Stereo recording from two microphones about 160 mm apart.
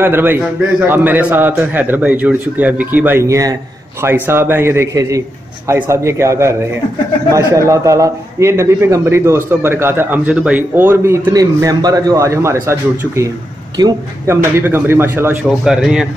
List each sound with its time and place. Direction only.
0.0 s a man's voice: 15° right (ahead or behind)
15.6 s speech: 5° right (ahead or behind)